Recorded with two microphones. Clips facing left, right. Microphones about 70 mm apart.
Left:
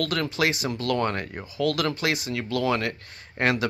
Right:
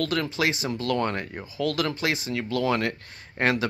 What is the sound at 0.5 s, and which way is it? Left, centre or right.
Speech, right.